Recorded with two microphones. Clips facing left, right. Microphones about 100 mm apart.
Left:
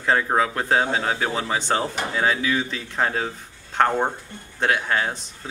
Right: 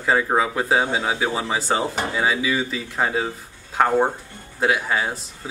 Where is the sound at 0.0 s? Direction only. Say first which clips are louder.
Right 1 dB; 5° right (ahead or behind).